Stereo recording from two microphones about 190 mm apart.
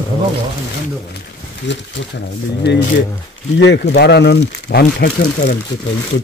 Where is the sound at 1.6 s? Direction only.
70° left (ahead or behind).